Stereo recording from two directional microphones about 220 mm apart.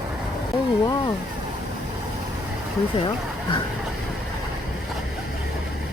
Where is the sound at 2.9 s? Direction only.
25° left (ahead or behind).